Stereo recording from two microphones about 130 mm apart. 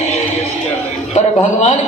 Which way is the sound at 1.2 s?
60° left (ahead or behind).